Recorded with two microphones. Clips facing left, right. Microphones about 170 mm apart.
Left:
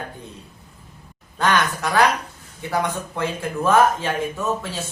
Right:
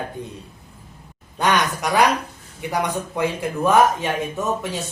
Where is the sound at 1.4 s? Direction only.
15° right (ahead or behind).